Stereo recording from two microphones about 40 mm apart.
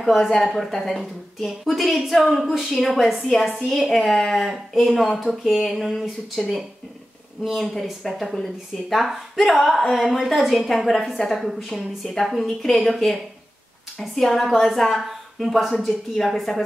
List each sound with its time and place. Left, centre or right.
0.0 s a woman's voice: centre
8.0 s a woman's voice: centre